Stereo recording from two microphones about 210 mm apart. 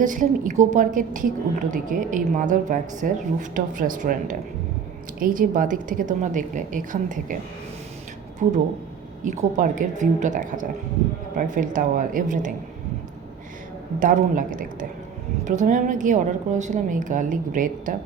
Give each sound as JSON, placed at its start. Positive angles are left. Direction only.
{"t": 0.0, "sound": "a woman's voice", "side_deg": -40}
{"t": 8.4, "sound": "a woman's voice", "side_deg": -35}
{"t": 14.0, "sound": "a woman's voice", "side_deg": -40}